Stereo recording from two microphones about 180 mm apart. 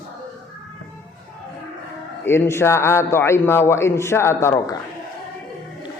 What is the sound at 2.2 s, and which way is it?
A man's voice, 15° left (ahead or behind).